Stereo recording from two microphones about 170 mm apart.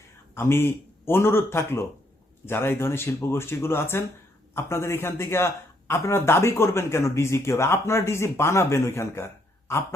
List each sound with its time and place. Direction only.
0.3 s speech: 15° left (ahead or behind)